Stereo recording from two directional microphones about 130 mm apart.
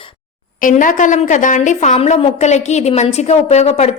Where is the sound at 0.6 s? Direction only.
90° left.